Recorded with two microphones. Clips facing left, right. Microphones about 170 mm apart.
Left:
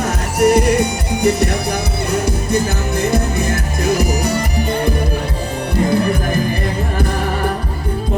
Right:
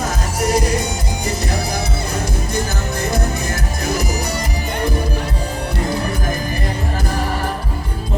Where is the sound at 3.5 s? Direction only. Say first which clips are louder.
Left 4 dB; 60° left (ahead or behind).